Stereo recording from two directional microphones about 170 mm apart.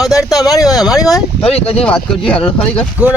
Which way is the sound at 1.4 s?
35° left (ahead or behind).